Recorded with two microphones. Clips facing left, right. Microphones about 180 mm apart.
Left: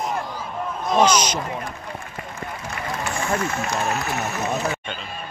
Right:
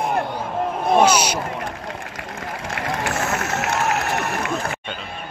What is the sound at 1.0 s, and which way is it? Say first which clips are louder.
Speech: right 1 dB; 10° right (ahead or behind).